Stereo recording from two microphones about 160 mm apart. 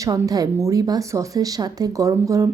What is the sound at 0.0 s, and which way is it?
A woman's voice, 25° right (ahead or behind).